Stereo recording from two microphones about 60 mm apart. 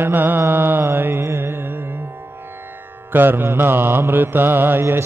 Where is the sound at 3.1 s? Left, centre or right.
Right.